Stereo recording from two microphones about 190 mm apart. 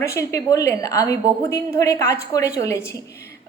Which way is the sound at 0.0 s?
15° left (ahead or behind).